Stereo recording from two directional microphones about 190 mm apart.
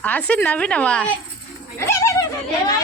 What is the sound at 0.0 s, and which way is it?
A woman's voice, 10° left (ahead or behind).